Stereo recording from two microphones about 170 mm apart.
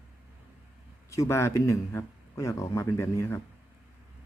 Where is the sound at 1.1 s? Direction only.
15° left (ahead or behind).